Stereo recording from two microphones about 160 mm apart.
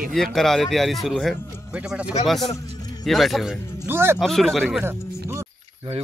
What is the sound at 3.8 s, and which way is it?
Speech, 15° right (ahead or behind).